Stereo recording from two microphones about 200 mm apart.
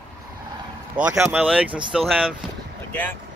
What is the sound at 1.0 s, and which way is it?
Speech, 10° right (ahead or behind).